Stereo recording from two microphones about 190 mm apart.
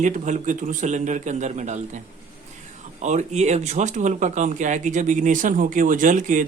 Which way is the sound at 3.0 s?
40° right (ahead or behind).